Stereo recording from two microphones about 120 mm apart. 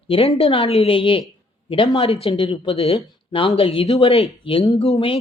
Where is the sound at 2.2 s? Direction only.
45° left (ahead or behind).